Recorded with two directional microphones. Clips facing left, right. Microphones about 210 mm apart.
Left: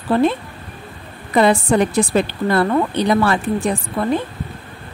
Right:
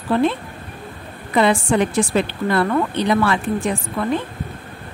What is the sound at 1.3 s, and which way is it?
Speech, 40° left (ahead or behind).